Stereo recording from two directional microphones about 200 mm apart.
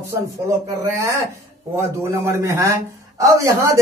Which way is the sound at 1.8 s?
15° right (ahead or behind).